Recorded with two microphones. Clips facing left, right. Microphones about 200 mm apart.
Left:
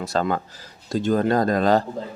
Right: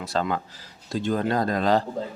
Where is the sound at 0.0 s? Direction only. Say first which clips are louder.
Left 3 dB; 45° left (ahead or behind).